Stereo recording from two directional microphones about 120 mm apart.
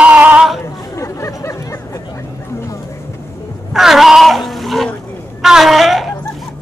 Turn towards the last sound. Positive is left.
turn(degrees=0)  # may be behind; listen again after turning